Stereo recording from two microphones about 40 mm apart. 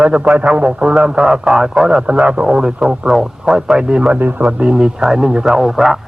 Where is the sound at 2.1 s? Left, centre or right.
Right.